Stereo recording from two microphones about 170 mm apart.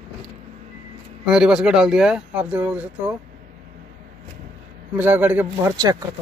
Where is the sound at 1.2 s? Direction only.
5° right (ahead or behind).